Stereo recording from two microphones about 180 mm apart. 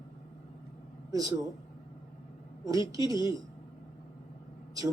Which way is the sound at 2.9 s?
20° right (ahead or behind).